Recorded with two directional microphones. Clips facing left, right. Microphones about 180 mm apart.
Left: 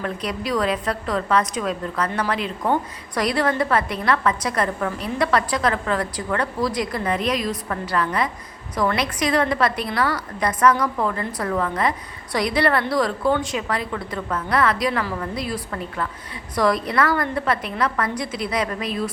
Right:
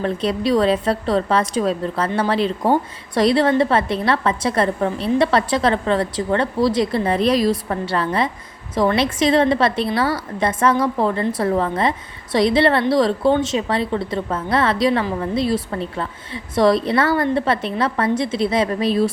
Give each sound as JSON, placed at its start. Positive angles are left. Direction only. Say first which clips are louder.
{"t": 0.0, "sound": "a woman's voice", "louder": "right 7 dB", "side_deg": -30}